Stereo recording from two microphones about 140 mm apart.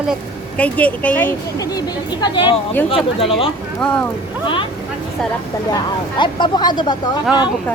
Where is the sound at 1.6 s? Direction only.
30° left (ahead or behind).